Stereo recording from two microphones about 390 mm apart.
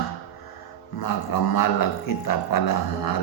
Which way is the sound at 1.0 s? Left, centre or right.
Left.